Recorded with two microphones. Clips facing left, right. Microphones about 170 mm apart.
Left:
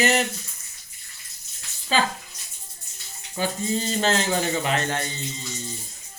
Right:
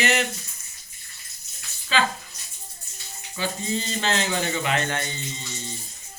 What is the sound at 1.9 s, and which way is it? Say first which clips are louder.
Speech: left 1 dB; 40° left (ahead or behind).